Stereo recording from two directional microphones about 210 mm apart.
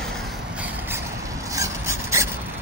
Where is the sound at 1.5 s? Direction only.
15° right (ahead or behind).